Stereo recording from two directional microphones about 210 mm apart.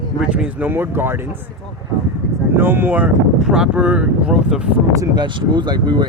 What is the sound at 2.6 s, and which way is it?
Speech, 10° right (ahead or behind).